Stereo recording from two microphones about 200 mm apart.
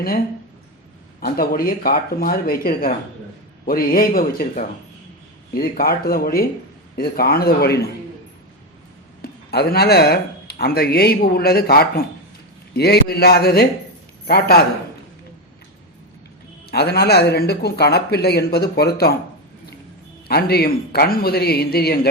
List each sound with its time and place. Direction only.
1.2 s speech: 50° left (ahead or behind)
9.2 s speech: 50° left (ahead or behind)
16.7 s speech: 50° left (ahead or behind)
20.2 s speech: 50° left (ahead or behind)